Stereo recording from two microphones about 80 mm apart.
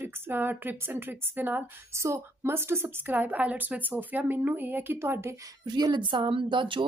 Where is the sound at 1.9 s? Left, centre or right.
Right.